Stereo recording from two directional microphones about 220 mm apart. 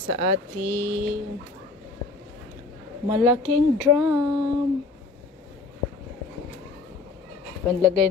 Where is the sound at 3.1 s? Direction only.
5° right (ahead or behind).